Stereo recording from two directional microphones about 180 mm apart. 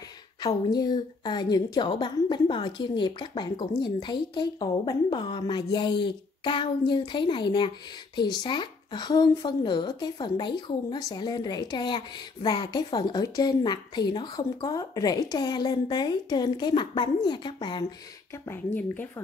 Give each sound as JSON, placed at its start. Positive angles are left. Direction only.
{"t": 0.4, "sound": "speech", "side_deg": 20}
{"t": 18.3, "sound": "speech", "side_deg": 10}